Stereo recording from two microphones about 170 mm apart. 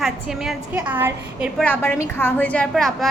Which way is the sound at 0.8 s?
10° right (ahead or behind).